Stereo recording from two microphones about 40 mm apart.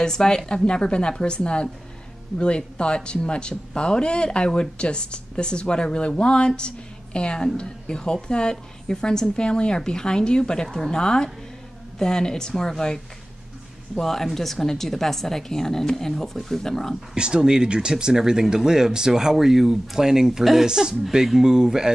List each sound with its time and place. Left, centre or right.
0.0 s a woman's voice: centre
17.1 s speech: centre
20.6 s speech: centre